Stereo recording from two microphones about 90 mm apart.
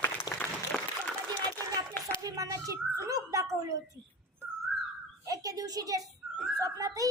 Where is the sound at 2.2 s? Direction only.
40° right (ahead or behind).